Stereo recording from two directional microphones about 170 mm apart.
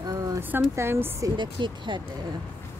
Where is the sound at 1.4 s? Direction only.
30° right (ahead or behind).